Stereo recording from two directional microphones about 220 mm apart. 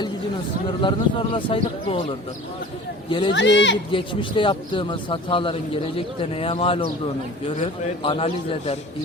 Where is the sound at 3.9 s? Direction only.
20° left (ahead or behind).